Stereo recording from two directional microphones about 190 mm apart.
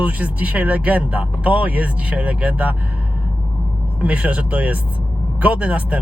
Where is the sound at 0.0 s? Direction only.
10° right (ahead or behind).